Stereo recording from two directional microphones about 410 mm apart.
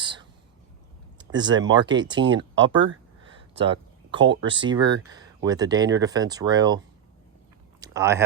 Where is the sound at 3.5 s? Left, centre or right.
Centre.